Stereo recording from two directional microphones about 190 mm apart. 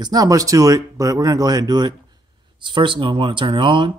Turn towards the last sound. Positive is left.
turn(degrees=-25)  # may be behind; listen again after turning